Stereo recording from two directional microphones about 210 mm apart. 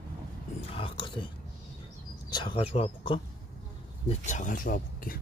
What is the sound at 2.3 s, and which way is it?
Speech, 25° left (ahead or behind).